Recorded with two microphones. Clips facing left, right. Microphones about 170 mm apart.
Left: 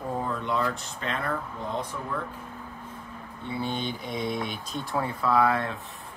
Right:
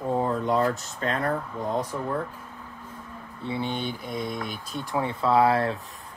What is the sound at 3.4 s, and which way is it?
Speech, 25° right (ahead or behind).